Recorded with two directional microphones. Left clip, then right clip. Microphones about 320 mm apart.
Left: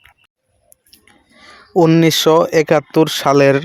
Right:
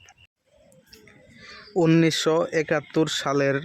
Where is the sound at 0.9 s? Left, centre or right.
Centre.